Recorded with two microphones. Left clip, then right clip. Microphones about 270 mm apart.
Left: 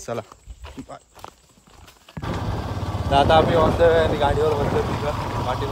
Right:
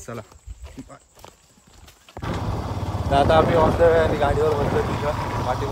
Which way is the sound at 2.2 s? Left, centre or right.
Centre.